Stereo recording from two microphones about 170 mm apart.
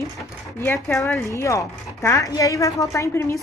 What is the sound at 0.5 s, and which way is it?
A woman's voice, 15° left (ahead or behind).